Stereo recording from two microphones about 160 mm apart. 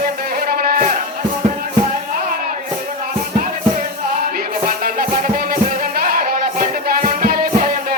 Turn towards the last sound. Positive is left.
turn(degrees=-65)  # may be behind; listen again after turning